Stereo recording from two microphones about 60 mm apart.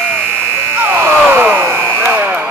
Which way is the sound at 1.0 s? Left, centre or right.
Right.